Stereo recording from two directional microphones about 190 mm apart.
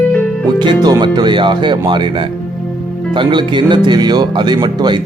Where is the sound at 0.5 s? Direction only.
20° right (ahead or behind).